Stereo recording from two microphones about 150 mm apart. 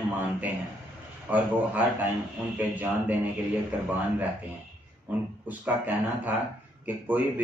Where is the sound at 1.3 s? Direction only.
10° right (ahead or behind).